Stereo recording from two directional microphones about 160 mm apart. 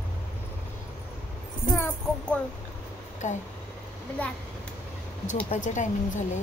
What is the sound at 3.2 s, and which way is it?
Speech, 50° left (ahead or behind).